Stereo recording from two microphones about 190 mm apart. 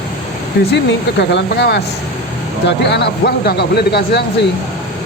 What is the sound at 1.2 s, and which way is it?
Speech, 65° left (ahead or behind).